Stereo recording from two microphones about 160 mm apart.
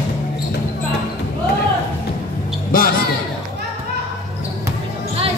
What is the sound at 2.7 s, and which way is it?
Music, 65° left (ahead or behind).